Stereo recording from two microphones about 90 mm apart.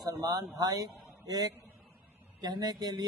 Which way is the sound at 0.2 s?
45° right (ahead or behind).